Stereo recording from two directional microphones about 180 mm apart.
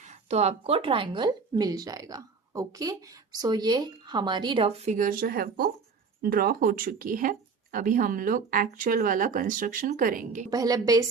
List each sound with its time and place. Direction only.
0.3 s a woman's voice: 35° right (ahead or behind)
4.9 s speech: 50° right (ahead or behind)
10.5 s a woman's voice: 20° right (ahead or behind)